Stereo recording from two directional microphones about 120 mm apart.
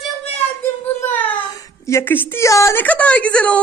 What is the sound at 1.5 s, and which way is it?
A woman's voice, 30° left (ahead or behind).